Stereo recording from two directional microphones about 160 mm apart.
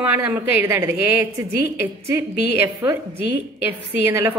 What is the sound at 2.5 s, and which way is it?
A woman's voice, 15° right (ahead or behind).